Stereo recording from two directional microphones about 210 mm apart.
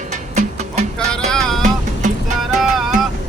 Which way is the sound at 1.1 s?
5° left (ahead or behind).